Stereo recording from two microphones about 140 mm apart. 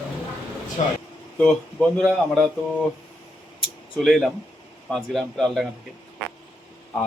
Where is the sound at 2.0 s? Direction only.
Centre (ahead or behind).